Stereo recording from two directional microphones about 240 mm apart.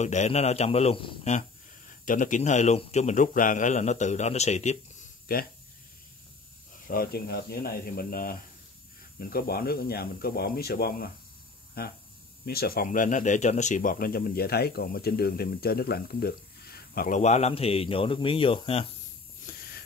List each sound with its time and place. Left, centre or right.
0.0 s a man's voice: left
6.9 s speech: left